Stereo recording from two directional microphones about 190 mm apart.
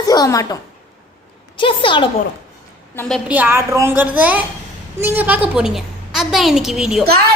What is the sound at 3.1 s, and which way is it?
A woman's voice, 10° right (ahead or behind).